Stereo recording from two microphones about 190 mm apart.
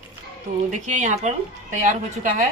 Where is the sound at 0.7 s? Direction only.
40° right (ahead or behind).